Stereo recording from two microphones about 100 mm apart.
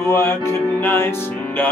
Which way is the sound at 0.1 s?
25° left (ahead or behind).